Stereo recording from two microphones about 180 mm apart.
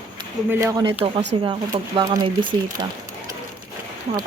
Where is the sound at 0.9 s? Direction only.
30° right (ahead or behind).